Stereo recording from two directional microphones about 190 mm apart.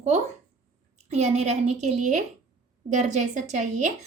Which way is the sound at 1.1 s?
35° right (ahead or behind).